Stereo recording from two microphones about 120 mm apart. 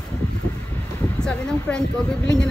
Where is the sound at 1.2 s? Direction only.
5° left (ahead or behind).